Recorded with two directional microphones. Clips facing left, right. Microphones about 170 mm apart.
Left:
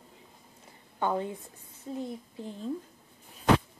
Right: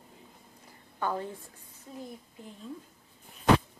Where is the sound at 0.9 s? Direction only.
20° left (ahead or behind).